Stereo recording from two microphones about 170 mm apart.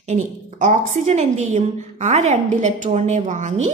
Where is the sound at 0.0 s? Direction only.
45° right (ahead or behind).